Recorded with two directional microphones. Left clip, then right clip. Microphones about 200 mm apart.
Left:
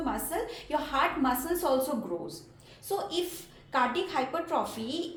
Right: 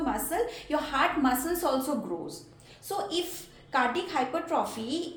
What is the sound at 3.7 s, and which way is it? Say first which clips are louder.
A woman's voice: right 1 dB; 15° right (ahead or behind).